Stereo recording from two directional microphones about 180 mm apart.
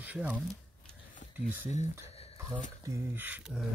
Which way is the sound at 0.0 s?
10° right (ahead or behind).